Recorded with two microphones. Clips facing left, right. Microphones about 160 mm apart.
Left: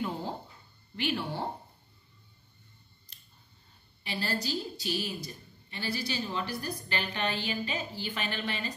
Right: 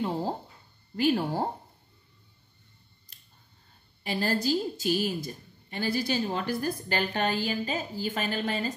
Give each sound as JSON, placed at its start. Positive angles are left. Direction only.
{"t": 0.0, "sound": "a sound", "side_deg": -35}
{"t": 0.9, "sound": "speech", "side_deg": -40}
{"t": 4.0, "sound": "a woman's voice", "side_deg": -45}